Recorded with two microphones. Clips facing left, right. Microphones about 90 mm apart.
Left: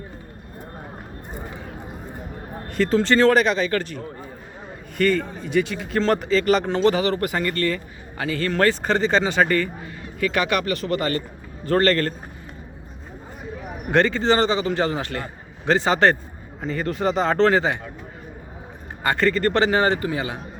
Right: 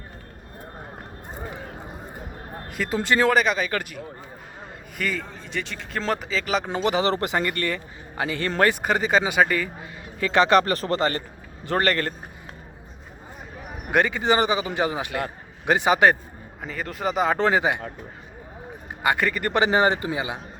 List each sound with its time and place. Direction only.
2.6 s speech: 5° right (ahead or behind)
6.7 s speech: 15° right (ahead or behind)
7.0 s speech: 25° right (ahead or behind); by 9.6 s 5° right (ahead or behind)
10.2 s speech: 25° right (ahead or behind)
11.6 s speech: 15° right (ahead or behind)
13.9 s speech: 10° right (ahead or behind)
19.0 s speech: 15° right (ahead or behind)